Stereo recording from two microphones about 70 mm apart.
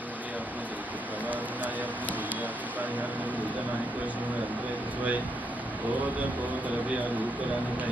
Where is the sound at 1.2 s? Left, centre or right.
Right.